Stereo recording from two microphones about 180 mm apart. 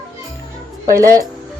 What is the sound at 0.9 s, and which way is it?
Speech, 15° right (ahead or behind).